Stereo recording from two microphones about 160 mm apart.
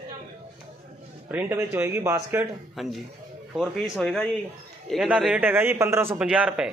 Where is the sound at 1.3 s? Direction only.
10° right (ahead or behind).